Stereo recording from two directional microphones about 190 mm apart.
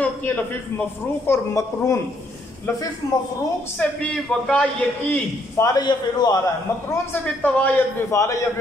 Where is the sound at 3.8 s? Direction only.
5° left (ahead or behind).